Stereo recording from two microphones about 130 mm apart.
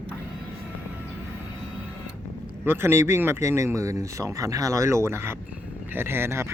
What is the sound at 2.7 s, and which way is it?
Speech, 20° right (ahead or behind).